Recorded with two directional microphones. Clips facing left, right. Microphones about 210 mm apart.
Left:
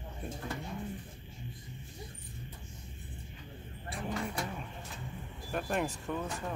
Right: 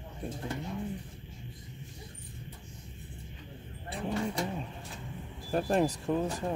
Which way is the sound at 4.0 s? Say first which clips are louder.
Right 4 dB; 25° right (ahead or behind).